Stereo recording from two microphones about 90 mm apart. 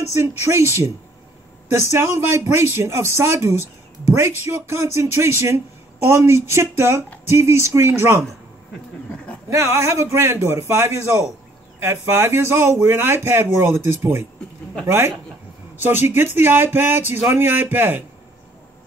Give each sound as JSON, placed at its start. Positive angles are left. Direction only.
{"t": 0.0, "sound": "a man's voice", "side_deg": -35}
{"t": 9.1, "sound": "a sound", "side_deg": 10}
{"t": 9.5, "sound": "a man's voice", "side_deg": -30}